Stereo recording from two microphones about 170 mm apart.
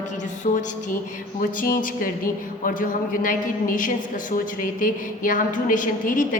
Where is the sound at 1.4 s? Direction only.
55° left (ahead or behind).